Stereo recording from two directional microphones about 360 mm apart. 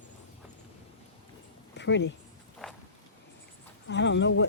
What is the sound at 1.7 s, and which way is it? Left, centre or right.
Speech, left.